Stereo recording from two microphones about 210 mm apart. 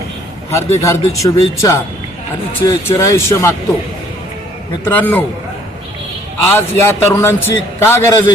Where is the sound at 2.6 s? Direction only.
15° left (ahead or behind).